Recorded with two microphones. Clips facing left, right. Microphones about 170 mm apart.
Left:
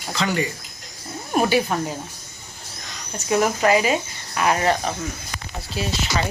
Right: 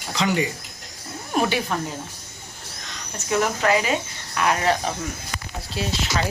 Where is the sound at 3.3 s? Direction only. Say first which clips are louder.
Left 3 dB; 15° left (ahead or behind).